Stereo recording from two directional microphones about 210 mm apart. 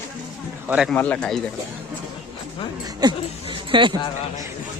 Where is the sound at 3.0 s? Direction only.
20° right (ahead or behind).